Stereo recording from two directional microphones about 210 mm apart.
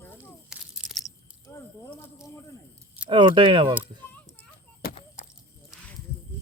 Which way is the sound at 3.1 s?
25° right (ahead or behind).